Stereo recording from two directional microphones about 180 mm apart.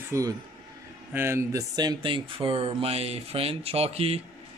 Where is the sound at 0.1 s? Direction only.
20° right (ahead or behind).